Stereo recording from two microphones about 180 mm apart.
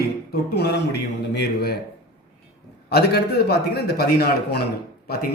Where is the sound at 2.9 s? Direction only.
60° left (ahead or behind).